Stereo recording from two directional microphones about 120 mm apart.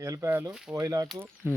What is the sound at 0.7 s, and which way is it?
Speech, 30° right (ahead or behind).